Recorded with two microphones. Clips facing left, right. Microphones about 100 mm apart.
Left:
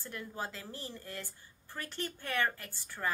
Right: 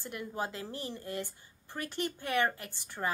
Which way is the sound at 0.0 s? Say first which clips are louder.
Right 4 dB; 15° right (ahead or behind).